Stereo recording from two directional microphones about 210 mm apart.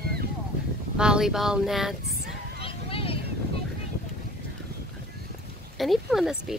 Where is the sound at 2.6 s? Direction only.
25° left (ahead or behind).